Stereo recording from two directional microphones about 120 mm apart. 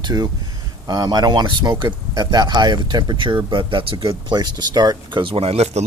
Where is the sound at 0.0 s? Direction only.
35° right (ahead or behind).